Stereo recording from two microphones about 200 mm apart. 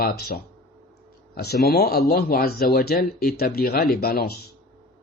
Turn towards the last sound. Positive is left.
turn(degrees=50)  # may be behind; listen again after turning